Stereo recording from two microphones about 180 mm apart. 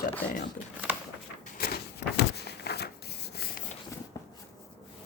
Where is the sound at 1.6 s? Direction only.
60° left (ahead or behind).